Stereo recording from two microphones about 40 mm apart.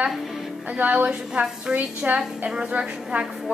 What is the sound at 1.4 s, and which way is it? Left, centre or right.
Speech, right.